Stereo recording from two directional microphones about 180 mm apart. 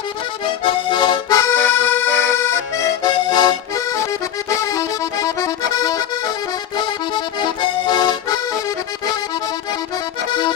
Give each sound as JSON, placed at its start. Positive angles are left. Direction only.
{"t": 0.6, "sound": "accordion", "side_deg": 25}